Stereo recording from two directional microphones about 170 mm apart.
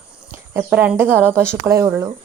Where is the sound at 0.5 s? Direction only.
10° right (ahead or behind).